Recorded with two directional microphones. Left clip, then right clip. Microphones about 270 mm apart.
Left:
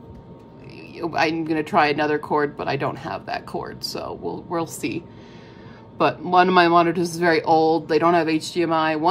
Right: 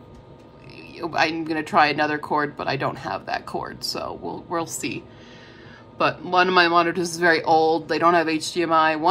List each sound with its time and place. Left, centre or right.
0.9 s speech: centre